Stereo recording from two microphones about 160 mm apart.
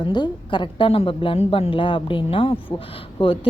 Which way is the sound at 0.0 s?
30° left (ahead or behind).